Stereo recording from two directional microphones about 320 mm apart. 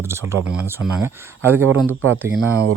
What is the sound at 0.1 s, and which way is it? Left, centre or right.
Speech, centre.